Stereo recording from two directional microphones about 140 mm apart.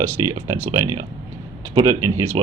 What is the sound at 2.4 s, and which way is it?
Speech, 40° right (ahead or behind).